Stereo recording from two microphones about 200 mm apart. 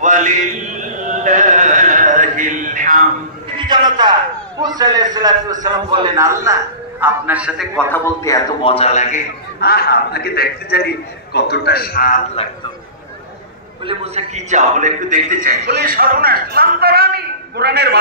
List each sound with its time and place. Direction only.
0.0 s a man's voice: 40° right (ahead or behind)
1.2 s chant: 40° right (ahead or behind)
3.5 s a man's voice: 20° right (ahead or behind); by 7.8 s 5° right (ahead or behind)
7.9 s a man's voice: 15° left (ahead or behind)
8.6 s a man's voice: 30° left (ahead or behind)
9.6 s a man's voice: 50° left (ahead or behind)
12.4 s a man's voice: 30° left (ahead or behind)
13.8 s a man's voice: 30° right (ahead or behind); by 17.9 s 55° right (ahead or behind)